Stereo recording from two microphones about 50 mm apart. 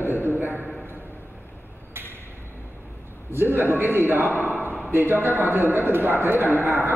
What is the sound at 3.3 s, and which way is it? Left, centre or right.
A man's voice, right.